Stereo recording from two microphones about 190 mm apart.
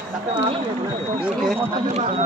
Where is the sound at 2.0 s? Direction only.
35° right (ahead or behind).